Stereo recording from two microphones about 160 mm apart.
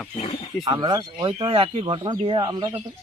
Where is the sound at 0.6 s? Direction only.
25° right (ahead or behind).